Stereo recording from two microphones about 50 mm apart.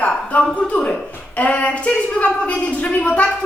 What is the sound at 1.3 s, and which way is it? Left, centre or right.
A woman's voice, left.